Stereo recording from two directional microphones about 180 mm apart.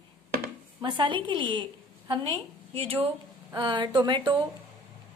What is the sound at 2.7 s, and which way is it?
A woman's voice, 35° right (ahead or behind).